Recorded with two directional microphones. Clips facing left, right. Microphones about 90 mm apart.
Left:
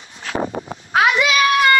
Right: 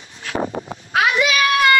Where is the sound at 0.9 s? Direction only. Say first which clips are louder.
Left 2 dB; 30° left (ahead or behind).